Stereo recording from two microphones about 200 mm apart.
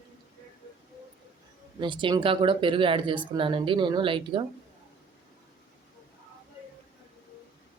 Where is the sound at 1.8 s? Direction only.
25° right (ahead or behind).